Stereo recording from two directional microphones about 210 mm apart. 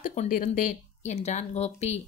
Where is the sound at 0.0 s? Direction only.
40° left (ahead or behind).